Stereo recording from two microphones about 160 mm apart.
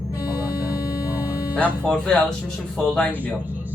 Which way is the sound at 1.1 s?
10° right (ahead or behind).